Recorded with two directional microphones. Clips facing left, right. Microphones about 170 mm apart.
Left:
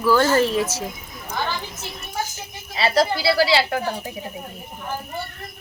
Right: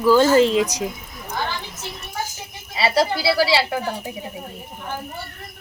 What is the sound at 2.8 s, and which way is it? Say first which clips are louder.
Speech: even; 10° right (ahead or behind).